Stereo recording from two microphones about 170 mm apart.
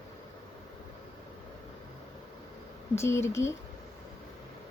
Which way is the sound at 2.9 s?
15° left (ahead or behind).